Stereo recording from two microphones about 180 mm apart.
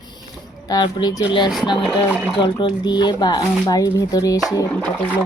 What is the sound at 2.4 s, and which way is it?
Speech, 25° left (ahead or behind).